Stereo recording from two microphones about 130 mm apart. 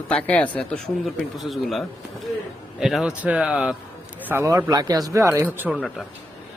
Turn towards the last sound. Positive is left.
turn(degrees=-5)  # may be behind; listen again after turning